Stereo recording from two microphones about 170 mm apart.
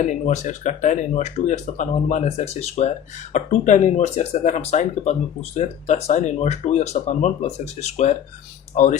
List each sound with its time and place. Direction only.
0.1 s speech: 45° left (ahead or behind)